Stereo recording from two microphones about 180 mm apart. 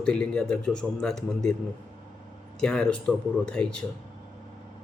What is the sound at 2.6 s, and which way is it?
A man's voice, 5° left (ahead or behind).